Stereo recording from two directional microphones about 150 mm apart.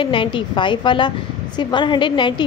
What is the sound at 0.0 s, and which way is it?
A woman's voice, 35° left (ahead or behind).